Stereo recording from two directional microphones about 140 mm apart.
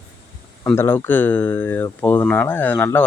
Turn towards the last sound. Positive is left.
turn(degrees=15)  # may be behind; listen again after turning